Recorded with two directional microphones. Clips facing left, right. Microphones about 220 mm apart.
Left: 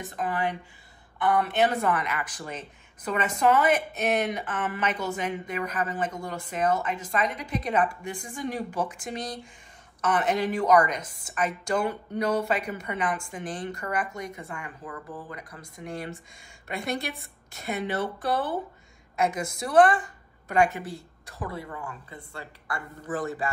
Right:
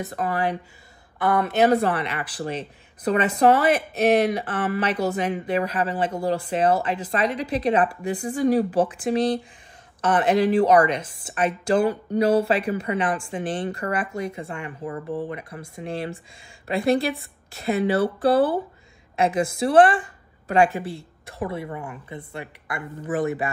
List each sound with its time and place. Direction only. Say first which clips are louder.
0.0 s a woman's voice: right 4 dB; 40° right (ahead or behind); by 23.5 s 20° right (ahead or behind)